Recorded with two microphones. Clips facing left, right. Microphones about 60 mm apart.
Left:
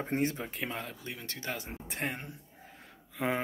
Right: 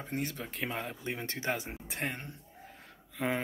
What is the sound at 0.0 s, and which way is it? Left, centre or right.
Speech, left.